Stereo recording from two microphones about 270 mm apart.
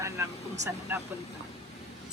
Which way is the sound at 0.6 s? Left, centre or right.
Right.